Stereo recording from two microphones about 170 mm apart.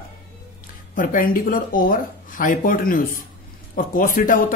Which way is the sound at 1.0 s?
55° left (ahead or behind).